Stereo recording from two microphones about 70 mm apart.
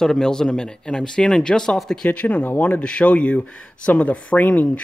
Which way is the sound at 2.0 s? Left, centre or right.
Left.